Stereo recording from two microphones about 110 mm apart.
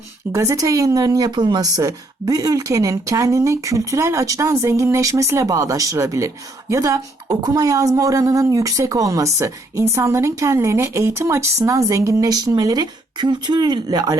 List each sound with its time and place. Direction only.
0.3 s a woman's voice: 30° right (ahead or behind)